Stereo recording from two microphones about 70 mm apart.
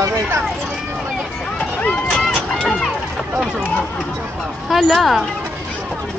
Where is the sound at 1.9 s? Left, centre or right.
Centre.